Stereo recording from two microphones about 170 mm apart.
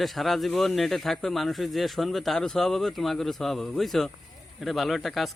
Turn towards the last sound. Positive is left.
turn(degrees=0)  # may be behind; listen again after turning